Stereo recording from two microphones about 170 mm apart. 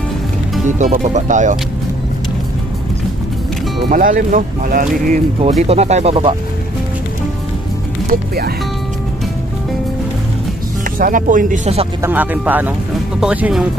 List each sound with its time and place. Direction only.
0.7 s speech: 45° right (ahead or behind)
3.9 s speech: 50° right (ahead or behind)
5.4 s speech: 40° right (ahead or behind)
10.8 s speech: 50° right (ahead or behind)
12.0 s speech: 10° right (ahead or behind)